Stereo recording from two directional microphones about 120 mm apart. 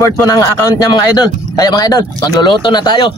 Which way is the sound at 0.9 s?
35° left (ahead or behind).